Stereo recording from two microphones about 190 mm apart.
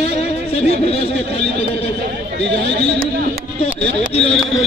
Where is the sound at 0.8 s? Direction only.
30° left (ahead or behind).